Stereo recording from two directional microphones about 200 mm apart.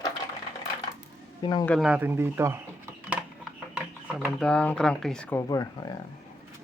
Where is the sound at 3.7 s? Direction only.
5° right (ahead or behind).